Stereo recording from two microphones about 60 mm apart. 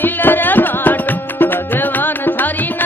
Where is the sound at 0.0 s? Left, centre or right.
Left.